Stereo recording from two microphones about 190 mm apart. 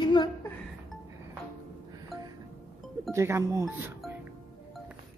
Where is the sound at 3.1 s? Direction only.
15° right (ahead or behind).